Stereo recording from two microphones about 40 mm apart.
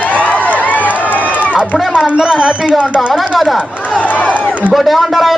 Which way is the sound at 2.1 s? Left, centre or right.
Right.